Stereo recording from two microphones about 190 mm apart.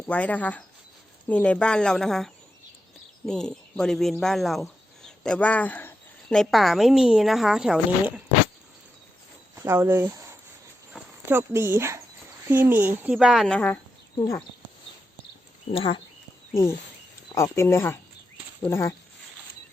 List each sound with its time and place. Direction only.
0.1 s speech: 10° left (ahead or behind)
9.6 s speech: 15° right (ahead or behind); by 13.7 s 5° left (ahead or behind)
15.7 s speech: 30° left (ahead or behind)
17.3 s speech: 15° left (ahead or behind)